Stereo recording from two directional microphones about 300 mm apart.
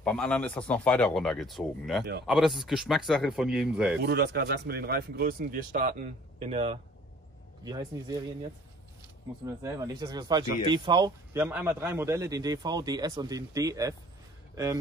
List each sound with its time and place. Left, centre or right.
0.0 s speech: centre
4.0 s speech: right; by 8.2 s centre
9.6 s speech: centre